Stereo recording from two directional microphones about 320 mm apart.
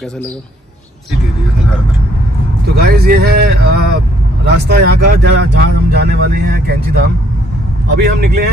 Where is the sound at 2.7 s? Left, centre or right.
Right.